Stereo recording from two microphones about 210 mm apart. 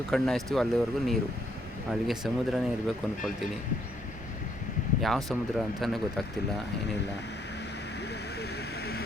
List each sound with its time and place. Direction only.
0.1 s speech: centre (ahead or behind)
4.9 s speech: centre (ahead or behind)
8.4 s vehicle: 50° left (ahead or behind)